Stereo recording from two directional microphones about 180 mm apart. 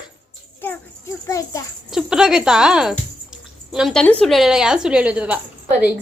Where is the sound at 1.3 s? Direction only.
15° left (ahead or behind).